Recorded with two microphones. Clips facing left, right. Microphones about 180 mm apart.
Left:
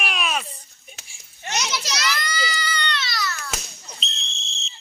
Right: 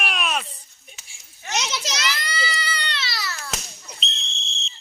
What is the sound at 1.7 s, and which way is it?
Baby cry, 25° right (ahead or behind).